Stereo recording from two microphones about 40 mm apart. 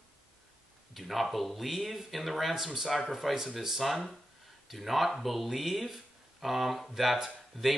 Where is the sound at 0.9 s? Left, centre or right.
Centre.